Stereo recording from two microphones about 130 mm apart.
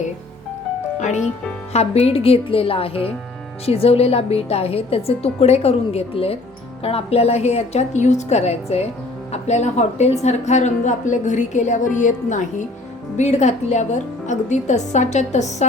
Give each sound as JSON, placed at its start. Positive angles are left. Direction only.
{"t": 1.7, "sound": "a woman's voice", "side_deg": 55}
{"t": 13.1, "sound": "a woman's voice", "side_deg": 65}